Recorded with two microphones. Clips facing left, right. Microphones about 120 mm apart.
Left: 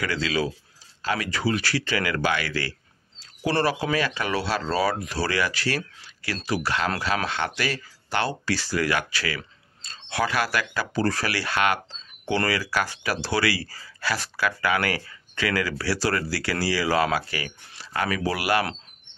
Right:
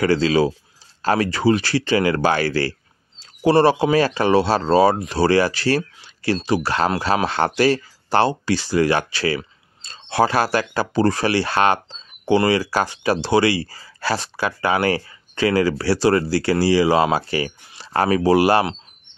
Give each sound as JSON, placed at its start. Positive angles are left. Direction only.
{"t": 0.0, "sound": "speech", "side_deg": -30}
{"t": 8.3, "sound": "speech", "side_deg": -20}